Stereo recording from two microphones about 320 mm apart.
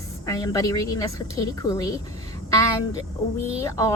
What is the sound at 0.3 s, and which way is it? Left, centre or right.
Speech, centre.